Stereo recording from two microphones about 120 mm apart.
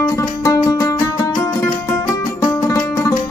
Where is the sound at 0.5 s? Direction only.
30° left (ahead or behind).